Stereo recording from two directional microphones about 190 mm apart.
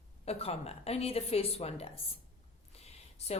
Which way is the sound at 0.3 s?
30° left (ahead or behind).